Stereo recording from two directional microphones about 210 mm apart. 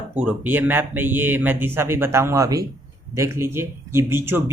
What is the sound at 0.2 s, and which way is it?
A man's voice, 10° right (ahead or behind).